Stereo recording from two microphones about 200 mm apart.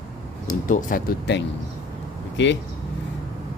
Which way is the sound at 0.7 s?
40° left (ahead or behind).